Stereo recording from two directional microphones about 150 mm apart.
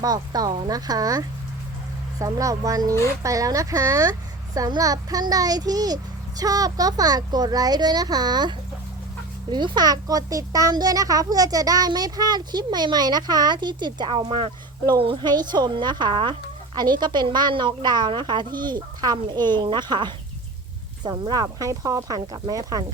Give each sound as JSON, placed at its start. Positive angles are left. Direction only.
{"t": 0.0, "sound": "a child's voice", "side_deg": -25}